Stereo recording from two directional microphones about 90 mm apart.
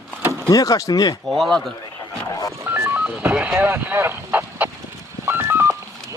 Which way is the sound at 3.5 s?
20° right (ahead or behind).